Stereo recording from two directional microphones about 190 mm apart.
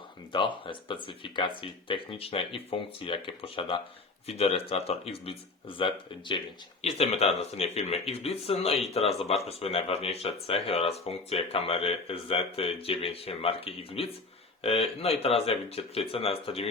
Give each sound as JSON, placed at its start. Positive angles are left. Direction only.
{"t": 0.3, "sound": "speech", "side_deg": 25}